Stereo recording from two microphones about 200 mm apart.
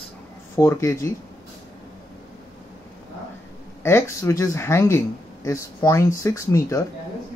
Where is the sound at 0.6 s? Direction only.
15° left (ahead or behind).